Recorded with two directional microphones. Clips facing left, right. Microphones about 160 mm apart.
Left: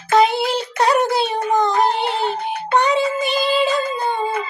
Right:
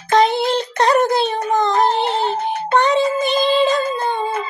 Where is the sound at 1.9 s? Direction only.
40° right (ahead or behind).